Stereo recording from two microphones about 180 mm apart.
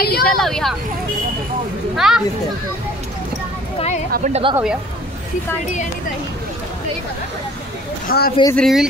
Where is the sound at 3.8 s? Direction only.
35° left (ahead or behind).